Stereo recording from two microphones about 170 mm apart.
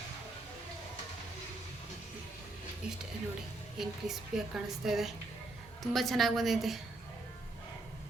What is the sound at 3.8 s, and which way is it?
A woman's voice, centre (ahead or behind).